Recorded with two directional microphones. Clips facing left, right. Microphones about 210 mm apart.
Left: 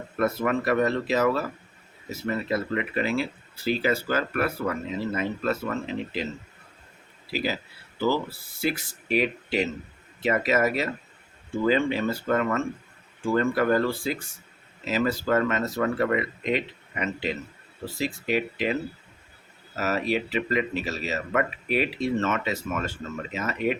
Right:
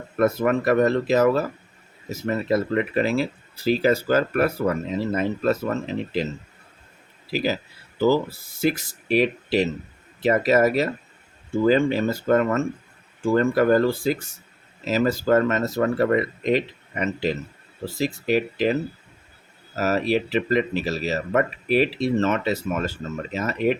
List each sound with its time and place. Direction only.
0.2 s speech: 45° right (ahead or behind)
7.9 s speech: 40° right (ahead or behind)